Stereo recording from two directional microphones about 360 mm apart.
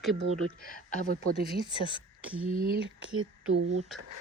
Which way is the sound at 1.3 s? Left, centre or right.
Centre.